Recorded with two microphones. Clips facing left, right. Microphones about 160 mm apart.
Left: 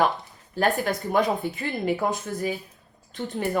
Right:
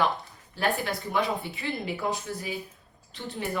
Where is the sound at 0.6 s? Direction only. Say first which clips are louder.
Left 5 dB; 45° left (ahead or behind).